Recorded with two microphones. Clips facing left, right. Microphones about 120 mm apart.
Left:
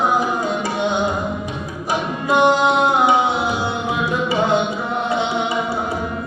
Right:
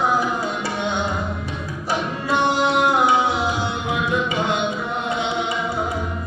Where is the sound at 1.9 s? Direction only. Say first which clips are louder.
Left 3 dB; 15° left (ahead or behind).